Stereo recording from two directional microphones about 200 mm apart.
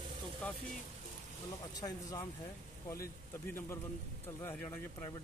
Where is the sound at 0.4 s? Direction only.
5° left (ahead or behind).